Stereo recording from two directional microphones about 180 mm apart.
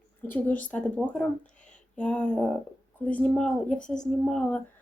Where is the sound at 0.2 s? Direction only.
10° left (ahead or behind).